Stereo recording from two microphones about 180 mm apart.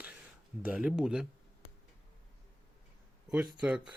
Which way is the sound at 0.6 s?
5° right (ahead or behind).